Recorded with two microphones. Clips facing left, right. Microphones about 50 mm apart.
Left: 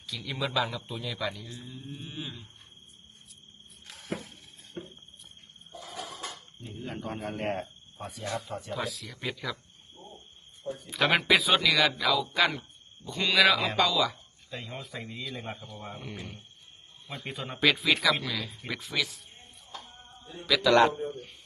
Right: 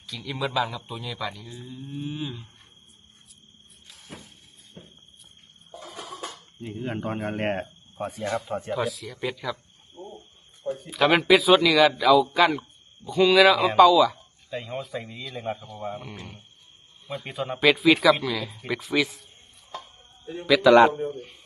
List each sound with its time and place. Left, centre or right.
0.1 s speech: centre
3.8 s music: left
5.9 s dishes: centre
6.6 s speech: right
8.4 s speech: right
8.7 s speech: centre
10.9 s speech: centre
18.9 s a man's voice: right
20.5 s a man's voice: centre
21.1 s speech: centre